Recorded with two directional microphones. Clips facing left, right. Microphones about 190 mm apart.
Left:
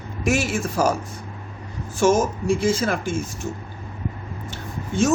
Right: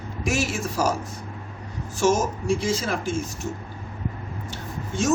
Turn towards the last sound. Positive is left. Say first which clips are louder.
# left 5 dB
turn(degrees=55)  # may be behind; listen again after turning